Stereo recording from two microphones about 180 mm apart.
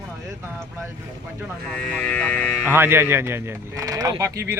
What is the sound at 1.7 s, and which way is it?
Speech, 5° left (ahead or behind).